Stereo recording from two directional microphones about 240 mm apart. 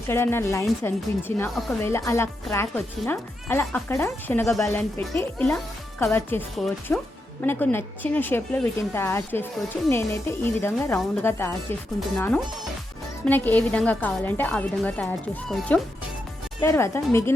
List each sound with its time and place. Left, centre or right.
0.1 s speech: centre